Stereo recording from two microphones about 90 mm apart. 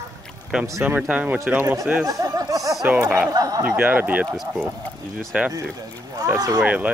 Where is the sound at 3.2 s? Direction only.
45° right (ahead or behind).